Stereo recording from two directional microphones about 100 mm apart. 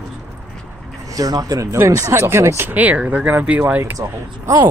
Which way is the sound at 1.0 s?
40° right (ahead or behind).